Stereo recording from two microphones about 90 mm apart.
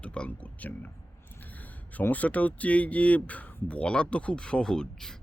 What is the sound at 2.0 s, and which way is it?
Speech, 15° left (ahead or behind).